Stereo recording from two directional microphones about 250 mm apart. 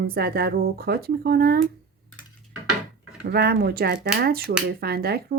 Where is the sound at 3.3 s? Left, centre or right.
Right.